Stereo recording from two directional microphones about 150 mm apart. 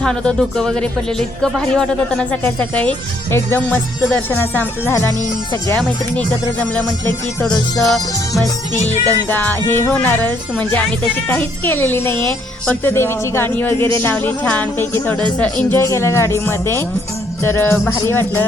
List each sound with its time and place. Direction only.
0.0 s speech: 5° left (ahead or behind)
6.1 s speech: 10° left (ahead or behind)
8.7 s music: 50° left (ahead or behind)
9.0 s speech: 10° left (ahead or behind)